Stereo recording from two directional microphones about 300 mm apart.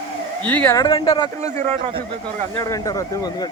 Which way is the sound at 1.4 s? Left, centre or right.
Centre.